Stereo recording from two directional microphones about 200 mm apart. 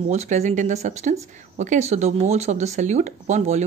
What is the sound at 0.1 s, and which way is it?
Speech, 35° right (ahead or behind).